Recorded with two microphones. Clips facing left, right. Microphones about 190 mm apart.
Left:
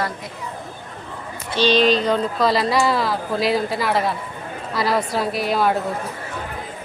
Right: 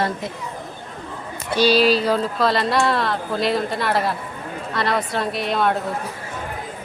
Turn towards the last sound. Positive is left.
turn(degrees=5)  # may be behind; listen again after turning